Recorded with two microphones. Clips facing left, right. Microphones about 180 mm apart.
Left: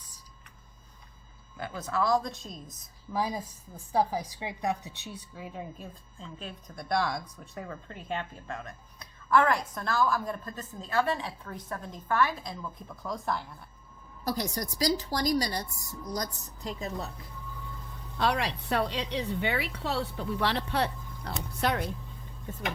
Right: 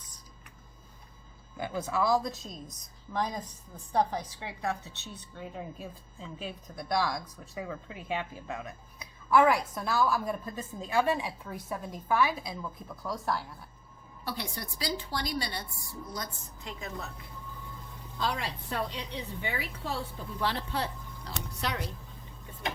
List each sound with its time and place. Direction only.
1.5 s a woman's voice: 15° right (ahead or behind)
14.3 s a woman's voice: 45° left (ahead or behind)
18.2 s a woman's voice: 70° left (ahead or behind); by 21.8 s 55° left (ahead or behind)